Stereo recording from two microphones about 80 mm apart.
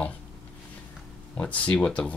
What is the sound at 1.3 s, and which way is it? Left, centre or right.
Speech, centre.